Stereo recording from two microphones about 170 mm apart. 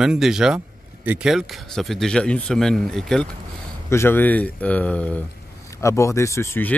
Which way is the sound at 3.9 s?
15° left (ahead or behind).